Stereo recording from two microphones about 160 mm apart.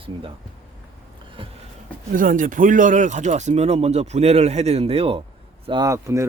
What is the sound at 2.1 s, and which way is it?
Speech, 55° right (ahead or behind).